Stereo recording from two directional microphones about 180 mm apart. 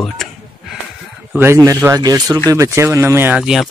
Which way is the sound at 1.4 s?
15° right (ahead or behind).